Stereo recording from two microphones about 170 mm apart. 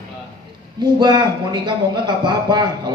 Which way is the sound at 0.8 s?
25° right (ahead or behind).